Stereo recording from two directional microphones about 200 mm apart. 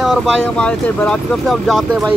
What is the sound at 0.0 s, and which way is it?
Speech, centre (ahead or behind).